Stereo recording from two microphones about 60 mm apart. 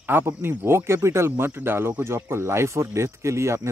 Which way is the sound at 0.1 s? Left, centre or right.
Right.